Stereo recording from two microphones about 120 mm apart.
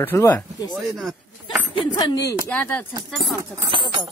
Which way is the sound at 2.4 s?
15° left (ahead or behind).